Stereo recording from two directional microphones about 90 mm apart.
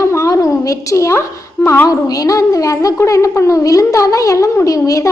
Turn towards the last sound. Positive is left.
turn(degrees=40)  # may be behind; listen again after turning